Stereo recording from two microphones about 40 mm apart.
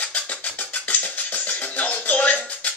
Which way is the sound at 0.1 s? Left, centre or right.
Left.